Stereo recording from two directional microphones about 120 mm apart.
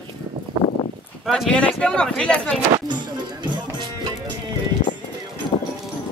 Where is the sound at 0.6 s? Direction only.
40° right (ahead or behind).